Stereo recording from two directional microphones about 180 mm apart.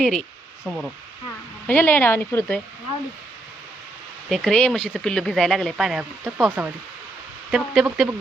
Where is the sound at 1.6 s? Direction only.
10° left (ahead or behind).